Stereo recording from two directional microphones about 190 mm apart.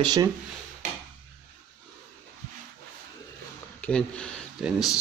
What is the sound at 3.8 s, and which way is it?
Speech, 5° left (ahead or behind).